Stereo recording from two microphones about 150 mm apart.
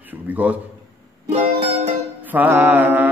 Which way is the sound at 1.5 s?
45° right (ahead or behind).